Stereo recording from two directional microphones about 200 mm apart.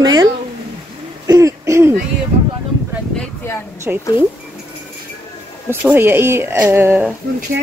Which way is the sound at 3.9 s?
5° right (ahead or behind).